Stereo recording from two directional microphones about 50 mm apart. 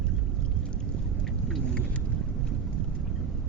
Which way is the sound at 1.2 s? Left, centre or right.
Centre.